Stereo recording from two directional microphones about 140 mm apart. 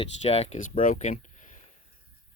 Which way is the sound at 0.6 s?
70° left (ahead or behind).